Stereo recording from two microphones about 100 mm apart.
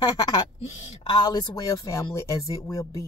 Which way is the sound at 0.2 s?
45° left (ahead or behind).